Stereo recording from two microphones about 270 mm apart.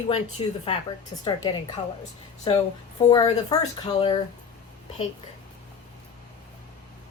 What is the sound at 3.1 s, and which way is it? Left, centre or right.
Speech, centre.